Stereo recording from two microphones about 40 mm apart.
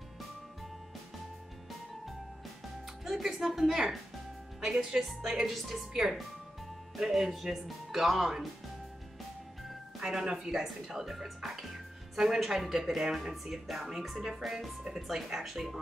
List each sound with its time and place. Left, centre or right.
3.0 s music: centre
3.3 s a woman's voice: centre
9.6 s speech: centre